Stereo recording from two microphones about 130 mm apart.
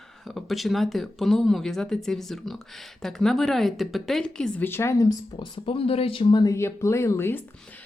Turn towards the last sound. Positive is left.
turn(degrees=20)  # may be behind; listen again after turning